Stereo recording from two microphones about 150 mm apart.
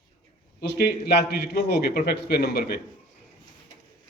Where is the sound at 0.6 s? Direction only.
90° left.